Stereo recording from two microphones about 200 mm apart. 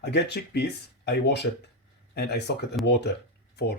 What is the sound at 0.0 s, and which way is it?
Speech, 55° left (ahead or behind).